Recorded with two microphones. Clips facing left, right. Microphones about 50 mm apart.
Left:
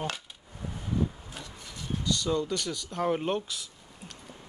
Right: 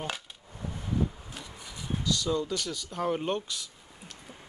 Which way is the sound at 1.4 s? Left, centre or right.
Centre.